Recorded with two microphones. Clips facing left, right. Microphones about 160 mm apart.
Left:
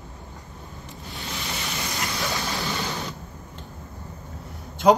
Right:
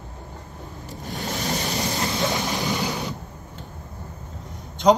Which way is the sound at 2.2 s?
20° right (ahead or behind).